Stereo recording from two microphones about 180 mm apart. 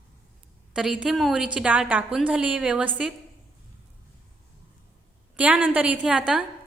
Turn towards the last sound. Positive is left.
turn(degrees=-5)  # may be behind; listen again after turning